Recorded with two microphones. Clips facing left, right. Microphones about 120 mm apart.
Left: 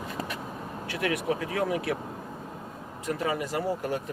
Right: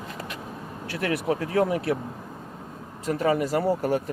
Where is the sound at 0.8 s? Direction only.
35° right (ahead or behind).